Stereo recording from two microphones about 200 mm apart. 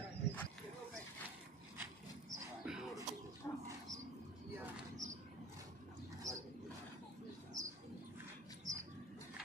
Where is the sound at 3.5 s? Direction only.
15° left (ahead or behind).